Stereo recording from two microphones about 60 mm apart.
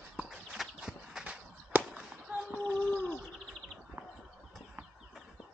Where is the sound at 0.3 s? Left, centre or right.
Centre.